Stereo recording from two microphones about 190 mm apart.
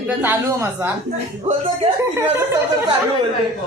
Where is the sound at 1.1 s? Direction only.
30° right (ahead or behind).